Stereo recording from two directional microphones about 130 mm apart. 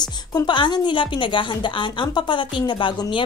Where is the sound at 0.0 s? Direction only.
30° left (ahead or behind).